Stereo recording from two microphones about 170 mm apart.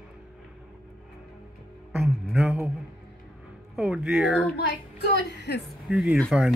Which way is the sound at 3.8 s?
5° right (ahead or behind).